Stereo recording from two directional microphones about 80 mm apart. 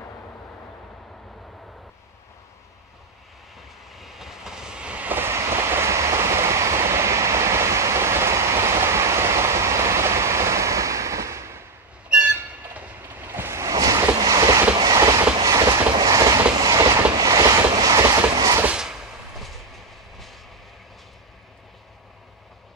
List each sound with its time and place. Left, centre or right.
3.9 s train: centre; by 11.6 s right
12.1 s a sound: centre
13.2 s waves: right
14.8 s train: right